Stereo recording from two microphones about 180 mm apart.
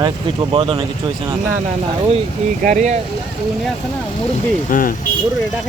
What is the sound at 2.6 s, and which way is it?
Speech, 45° right (ahead or behind).